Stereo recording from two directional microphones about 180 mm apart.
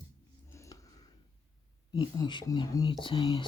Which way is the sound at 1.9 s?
25° left (ahead or behind).